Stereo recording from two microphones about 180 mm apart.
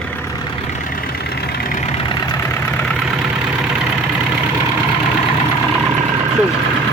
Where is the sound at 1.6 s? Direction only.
50° left (ahead or behind).